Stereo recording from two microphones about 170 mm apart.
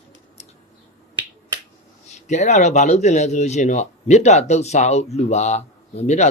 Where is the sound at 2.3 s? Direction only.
45° left (ahead or behind).